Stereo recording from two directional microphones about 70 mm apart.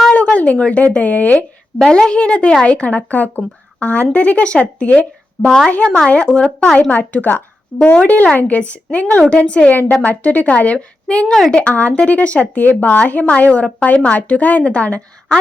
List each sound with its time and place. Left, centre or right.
0.1 s speech: centre
1.8 s a woman's voice: centre
5.5 s a woman's voice: centre
7.0 s a woman's voice: left